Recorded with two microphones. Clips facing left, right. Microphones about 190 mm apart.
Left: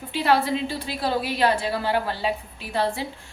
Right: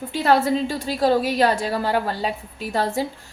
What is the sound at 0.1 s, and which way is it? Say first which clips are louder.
A woman's voice: right 3 dB; 45° right (ahead or behind).